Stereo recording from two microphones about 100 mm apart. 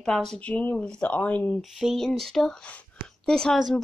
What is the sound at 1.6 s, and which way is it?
Speech, 5° right (ahead or behind).